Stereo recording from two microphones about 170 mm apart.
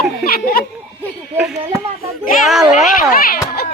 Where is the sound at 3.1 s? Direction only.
60° left (ahead or behind).